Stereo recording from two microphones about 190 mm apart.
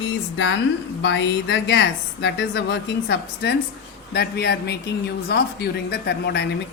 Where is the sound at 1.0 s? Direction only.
65° left (ahead or behind).